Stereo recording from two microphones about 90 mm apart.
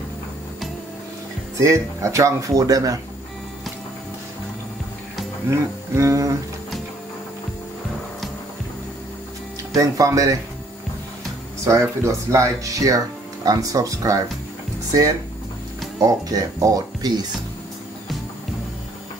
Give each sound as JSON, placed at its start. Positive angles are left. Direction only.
{"t": 1.6, "sound": "speech", "side_deg": -35}
{"t": 5.5, "sound": "speech", "side_deg": -35}
{"t": 9.8, "sound": "speech", "side_deg": -40}
{"t": 11.6, "sound": "speech", "side_deg": -35}